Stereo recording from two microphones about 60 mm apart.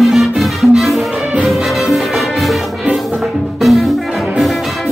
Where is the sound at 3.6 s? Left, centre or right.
Centre.